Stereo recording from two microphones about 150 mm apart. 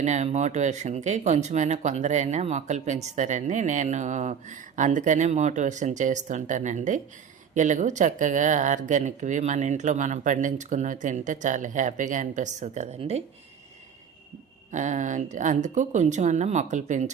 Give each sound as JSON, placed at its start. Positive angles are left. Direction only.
{"t": 0.0, "sound": "speech", "side_deg": -50}
{"t": 14.7, "sound": "speech", "side_deg": -55}